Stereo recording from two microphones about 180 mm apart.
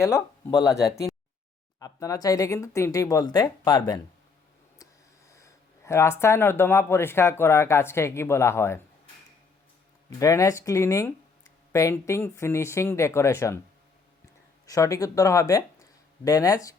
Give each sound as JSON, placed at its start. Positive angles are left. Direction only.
{"t": 0.0, "sound": "speech", "side_deg": 15}
{"t": 5.3, "sound": "speech", "side_deg": 15}
{"t": 10.1, "sound": "speech", "side_deg": 15}
{"t": 14.7, "sound": "speech", "side_deg": 20}